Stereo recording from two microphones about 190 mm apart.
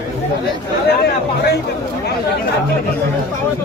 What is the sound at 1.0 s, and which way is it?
Speech, 60° left (ahead or behind).